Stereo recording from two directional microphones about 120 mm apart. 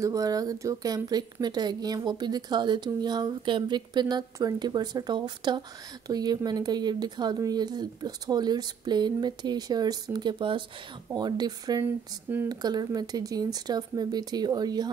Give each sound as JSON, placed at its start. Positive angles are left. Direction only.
{"t": 0.0, "sound": "speech", "side_deg": -30}
{"t": 11.8, "sound": "speech", "side_deg": -15}
{"t": 12.4, "sound": "speech", "side_deg": -35}